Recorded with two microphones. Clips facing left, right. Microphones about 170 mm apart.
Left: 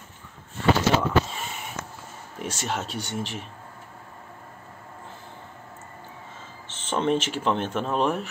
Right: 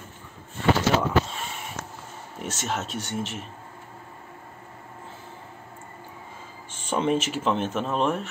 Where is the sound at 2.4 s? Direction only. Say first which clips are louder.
Even; centre (ahead or behind).